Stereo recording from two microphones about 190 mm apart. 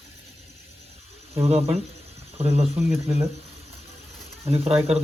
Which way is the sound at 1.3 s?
30° right (ahead or behind).